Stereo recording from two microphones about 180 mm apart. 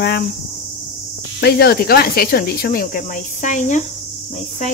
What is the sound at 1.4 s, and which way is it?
Speech, 60° left (ahead or behind).